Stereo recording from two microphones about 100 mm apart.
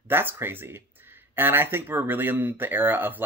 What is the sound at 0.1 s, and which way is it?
Speech, 20° right (ahead or behind).